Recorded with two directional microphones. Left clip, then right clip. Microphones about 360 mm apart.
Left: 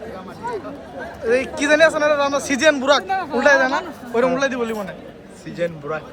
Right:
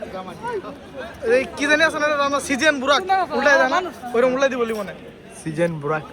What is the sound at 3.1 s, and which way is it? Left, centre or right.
Speech, centre.